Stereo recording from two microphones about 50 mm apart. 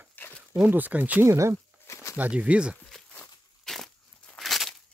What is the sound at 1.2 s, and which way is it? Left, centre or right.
Speech, right.